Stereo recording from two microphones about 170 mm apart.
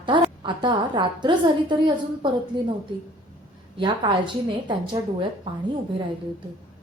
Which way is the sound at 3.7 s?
30° right (ahead or behind).